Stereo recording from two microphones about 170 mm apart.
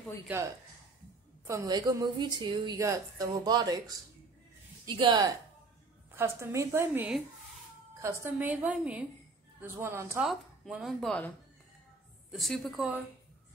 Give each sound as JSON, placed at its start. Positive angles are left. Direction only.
{"t": 0.3, "sound": "a woman's voice", "side_deg": -10}
{"t": 1.4, "sound": "a woman's voice", "side_deg": -20}
{"t": 6.1, "sound": "a woman's voice", "side_deg": -15}
{"t": 10.2, "sound": "speech", "side_deg": 0}